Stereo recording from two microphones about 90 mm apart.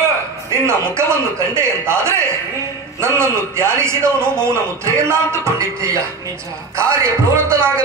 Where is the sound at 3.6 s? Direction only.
30° right (ahead or behind).